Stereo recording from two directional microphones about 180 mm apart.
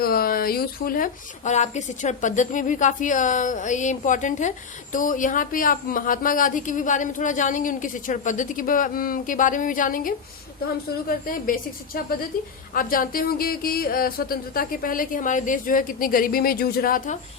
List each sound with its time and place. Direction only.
0.0 s speech: 55° left (ahead or behind)